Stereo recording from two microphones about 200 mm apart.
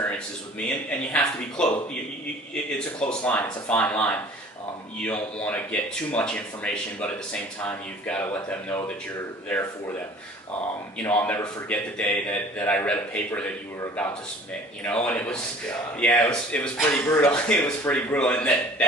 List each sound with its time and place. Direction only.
0.9 s a man's voice: 5° left (ahead or behind)
10.9 s a man's voice: 10° left (ahead or behind)
14.8 s a man's voice: 5° left (ahead or behind)